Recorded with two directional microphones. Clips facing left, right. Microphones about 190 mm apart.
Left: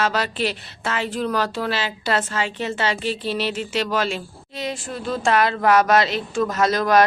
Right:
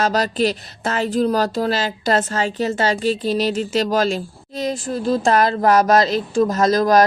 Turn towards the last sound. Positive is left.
turn(degrees=-40)  # may be behind; listen again after turning